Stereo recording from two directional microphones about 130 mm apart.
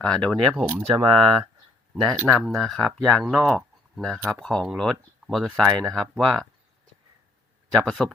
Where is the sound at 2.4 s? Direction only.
Centre (ahead or behind).